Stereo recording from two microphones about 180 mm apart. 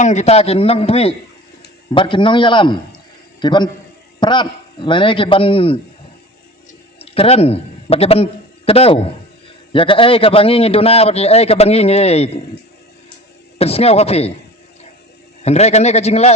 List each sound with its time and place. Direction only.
0.0 s a man's voice: 40° left (ahead or behind)
7.0 s a man's voice: 35° left (ahead or behind)
13.6 s a man's voice: 35° left (ahead or behind)
15.4 s a man's voice: 35° left (ahead or behind)